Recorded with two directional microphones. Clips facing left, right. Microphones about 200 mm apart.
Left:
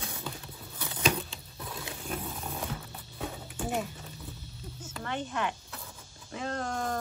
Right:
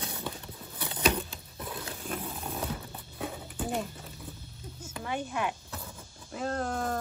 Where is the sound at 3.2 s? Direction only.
Centre (ahead or behind).